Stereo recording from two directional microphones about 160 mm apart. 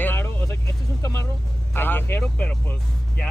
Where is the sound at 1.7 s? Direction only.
15° left (ahead or behind).